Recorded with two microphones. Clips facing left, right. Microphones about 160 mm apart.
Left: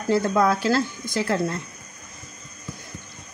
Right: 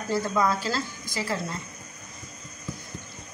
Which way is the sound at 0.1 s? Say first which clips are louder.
Left 5 dB; 60° left (ahead or behind).